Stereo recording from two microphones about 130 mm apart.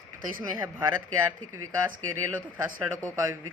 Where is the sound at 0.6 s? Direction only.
25° right (ahead or behind).